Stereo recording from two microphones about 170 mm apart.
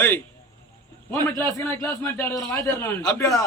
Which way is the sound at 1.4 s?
15° left (ahead or behind).